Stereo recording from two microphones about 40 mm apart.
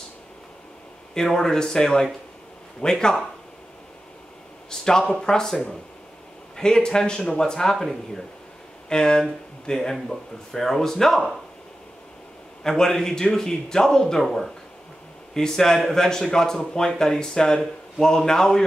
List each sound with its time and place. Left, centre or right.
1.1 s speech: centre
4.6 s speech: centre
12.6 s speech: centre